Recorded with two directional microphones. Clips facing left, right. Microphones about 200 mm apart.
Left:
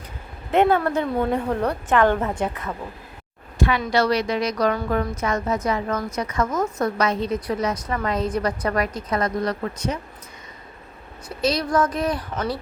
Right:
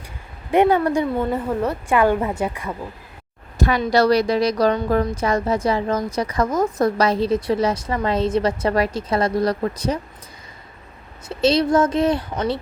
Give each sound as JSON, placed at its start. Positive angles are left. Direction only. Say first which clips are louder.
{"t": 0.5, "sound": "a woman's voice", "louder": "right 2 dB", "side_deg": -15}
{"t": 3.6, "sound": "a woman's voice", "louder": "right 3 dB", "side_deg": -40}
{"t": 11.3, "sound": "a woman's voice", "louder": "right 6 dB", "side_deg": -25}